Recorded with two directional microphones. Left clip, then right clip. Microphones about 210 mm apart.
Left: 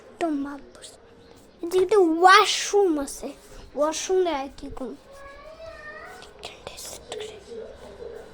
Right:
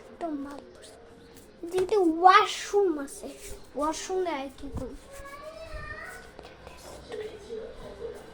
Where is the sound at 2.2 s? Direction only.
55° left (ahead or behind).